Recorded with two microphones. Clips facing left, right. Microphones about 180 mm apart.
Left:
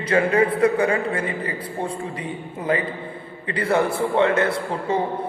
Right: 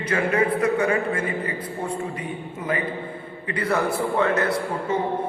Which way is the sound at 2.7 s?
30° left (ahead or behind).